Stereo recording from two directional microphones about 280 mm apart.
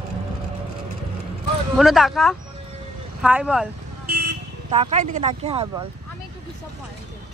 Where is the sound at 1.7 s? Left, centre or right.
Centre.